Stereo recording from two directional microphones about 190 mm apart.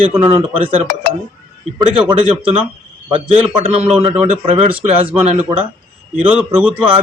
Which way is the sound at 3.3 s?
30° right (ahead or behind).